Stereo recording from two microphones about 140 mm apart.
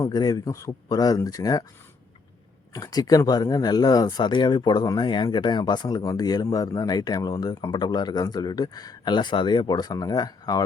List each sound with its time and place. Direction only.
0.0 s speech: 30° left (ahead or behind)
2.7 s speech: 25° left (ahead or behind)